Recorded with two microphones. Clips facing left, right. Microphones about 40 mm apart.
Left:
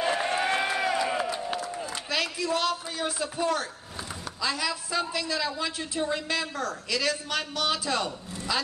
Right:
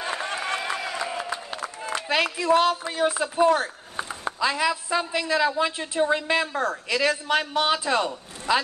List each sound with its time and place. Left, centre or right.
0.3 s run: left
2.0 s a woman's voice: right